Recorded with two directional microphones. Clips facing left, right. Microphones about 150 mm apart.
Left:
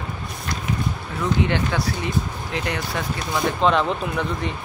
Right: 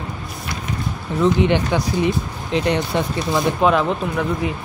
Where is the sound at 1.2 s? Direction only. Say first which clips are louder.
Right 5 dB; 20° right (ahead or behind).